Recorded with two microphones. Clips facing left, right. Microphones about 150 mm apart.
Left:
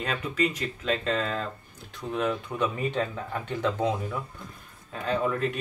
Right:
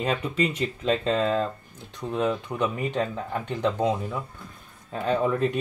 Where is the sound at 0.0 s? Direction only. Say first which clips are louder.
Right 3 dB; 30° right (ahead or behind).